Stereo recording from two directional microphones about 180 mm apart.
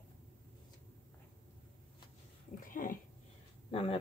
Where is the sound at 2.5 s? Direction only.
50° left (ahead or behind).